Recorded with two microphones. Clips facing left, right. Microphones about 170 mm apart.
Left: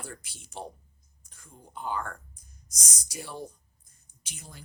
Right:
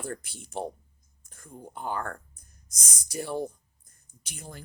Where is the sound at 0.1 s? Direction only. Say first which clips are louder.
Right 8 dB; 55° right (ahead or behind).